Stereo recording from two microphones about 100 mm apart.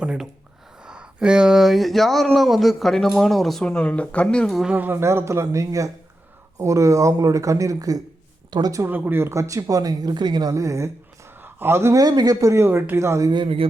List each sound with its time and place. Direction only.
0.0 s speech: 10° right (ahead or behind)
4.6 s speech: 15° right (ahead or behind); by 8.0 s 35° right (ahead or behind)
8.4 s speech: 50° right (ahead or behind)
8.9 s speech: 20° right (ahead or behind); by 10.5 s 45° right (ahead or behind)
10.5 s speech: 30° right (ahead or behind)
11.3 s a man's voice: 20° right (ahead or behind)
12.0 s speech: 40° right (ahead or behind)
13.3 s a man's voice: 60° right (ahead or behind)